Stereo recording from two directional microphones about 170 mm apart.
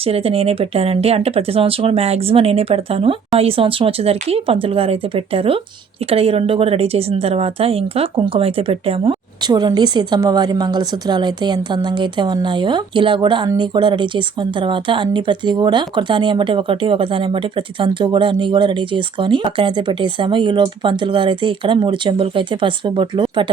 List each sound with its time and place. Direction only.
0.0 s speech: 35° right (ahead or behind)